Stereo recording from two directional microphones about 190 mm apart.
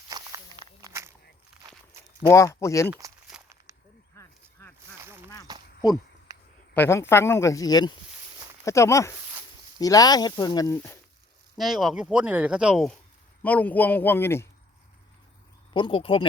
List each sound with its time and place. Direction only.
0.1 s walk: 20° right (ahead or behind)
2.3 s speech: 15° left (ahead or behind)
3.3 s walk: 5° right (ahead or behind)
4.9 s a sound: 10° right (ahead or behind)
6.7 s speech: 10° left (ahead or behind)
11.5 s speech: centre (ahead or behind)
15.7 s speech: 25° left (ahead or behind)